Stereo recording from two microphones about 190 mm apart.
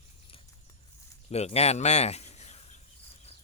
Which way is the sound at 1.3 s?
35° left (ahead or behind).